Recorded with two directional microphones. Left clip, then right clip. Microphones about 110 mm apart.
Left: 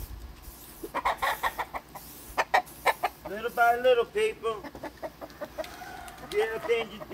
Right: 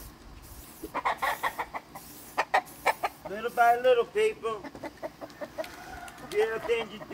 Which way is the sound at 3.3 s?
5° right (ahead or behind).